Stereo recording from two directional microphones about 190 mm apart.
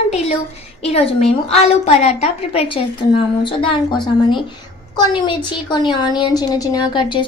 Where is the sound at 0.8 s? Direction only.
30° left (ahead or behind).